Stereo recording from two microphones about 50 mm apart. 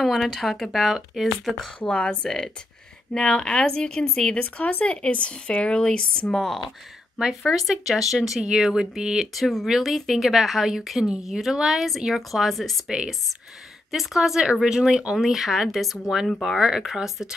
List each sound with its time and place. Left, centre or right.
0.0 s a woman's voice: centre
1.9 s speech: left
2.2 s speech: centre
4.4 s speech: left; by 6.6 s centre
7.2 s a woman's voice: centre
12.8 s speech: centre
13.9 s speech: centre
15.1 s a woman's voice: centre